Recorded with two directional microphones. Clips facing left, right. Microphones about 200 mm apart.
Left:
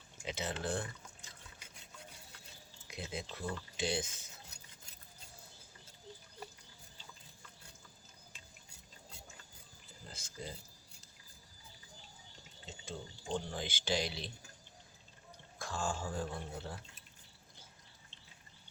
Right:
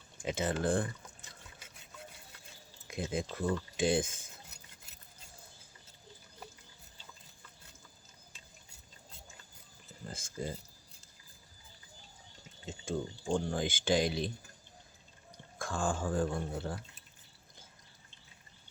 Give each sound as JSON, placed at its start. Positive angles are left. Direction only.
{"t": 0.3, "sound": "speech", "side_deg": -50}
{"t": 2.8, "sound": "speech", "side_deg": -50}
{"t": 10.1, "sound": "speech", "side_deg": -50}
{"t": 12.6, "sound": "speech", "side_deg": -50}
{"t": 15.5, "sound": "speech", "side_deg": -50}